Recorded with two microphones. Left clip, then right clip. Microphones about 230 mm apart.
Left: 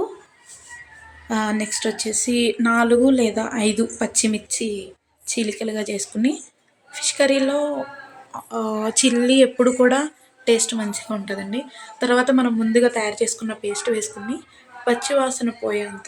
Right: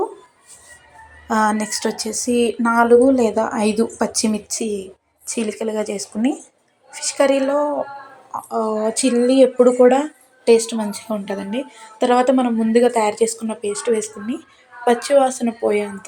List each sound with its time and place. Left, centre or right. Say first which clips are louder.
1.3 s speech: right 6 dB; centre